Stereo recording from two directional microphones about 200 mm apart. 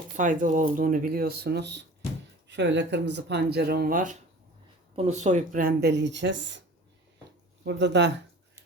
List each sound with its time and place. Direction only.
0.2 s speech: 40° right (ahead or behind); by 6.6 s 60° right (ahead or behind)
7.6 s speech: 60° right (ahead or behind)